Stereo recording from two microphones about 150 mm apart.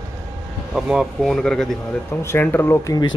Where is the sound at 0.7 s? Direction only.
5° right (ahead or behind).